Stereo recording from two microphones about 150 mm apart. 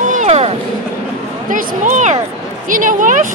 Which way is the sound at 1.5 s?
65° right (ahead or behind).